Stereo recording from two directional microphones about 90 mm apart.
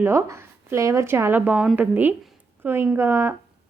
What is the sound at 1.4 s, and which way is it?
A woman's voice, 15° right (ahead or behind).